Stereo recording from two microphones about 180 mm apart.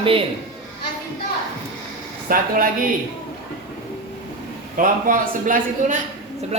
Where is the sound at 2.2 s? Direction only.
50° right (ahead or behind).